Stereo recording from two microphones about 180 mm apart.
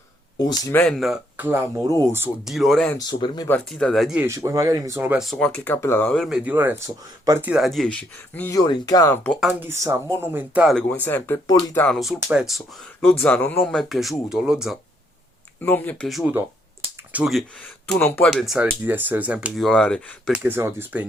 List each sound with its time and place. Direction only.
0.3 s speech: 20° left (ahead or behind)
0.8 s speech: centre (ahead or behind); by 2.3 s 15° right (ahead or behind)
2.4 s speech: centre (ahead or behind)
3.1 s speech: 25° left (ahead or behind)
3.5 s speech: 5° left (ahead or behind)
4.3 s speech: 20° right (ahead or behind); by 9.1 s 20° left (ahead or behind)
9.2 s speech: 5° left (ahead or behind)
9.5 s speech: 10° right (ahead or behind)
10.8 s speech: 10° left (ahead or behind)
11.9 s speech: 5° right (ahead or behind)
15.6 s speech: 10° left (ahead or behind)
17.9 s speech: 10° left (ahead or behind)
20.3 s speech: 10° right (ahead or behind)